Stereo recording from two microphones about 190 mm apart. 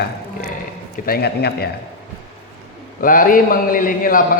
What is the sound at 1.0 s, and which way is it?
Speech, 55° left (ahead or behind).